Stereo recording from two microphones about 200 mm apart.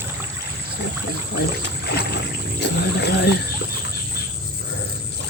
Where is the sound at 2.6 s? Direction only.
55° left (ahead or behind).